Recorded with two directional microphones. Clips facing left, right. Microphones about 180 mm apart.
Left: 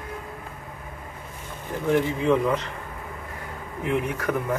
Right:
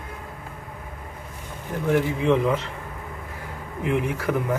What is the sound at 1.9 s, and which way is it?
Speech, 15° right (ahead or behind).